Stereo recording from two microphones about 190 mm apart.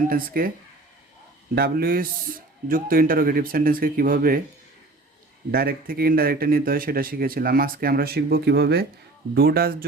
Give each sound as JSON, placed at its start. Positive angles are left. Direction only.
{"t": 0.1, "sound": "speech", "side_deg": -50}
{"t": 1.5, "sound": "speech", "side_deg": -55}
{"t": 5.5, "sound": "speech", "side_deg": -50}